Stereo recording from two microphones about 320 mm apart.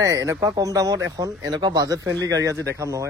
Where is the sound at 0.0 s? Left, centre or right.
Centre.